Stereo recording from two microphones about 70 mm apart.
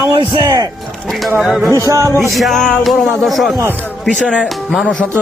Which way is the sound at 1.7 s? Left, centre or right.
Right.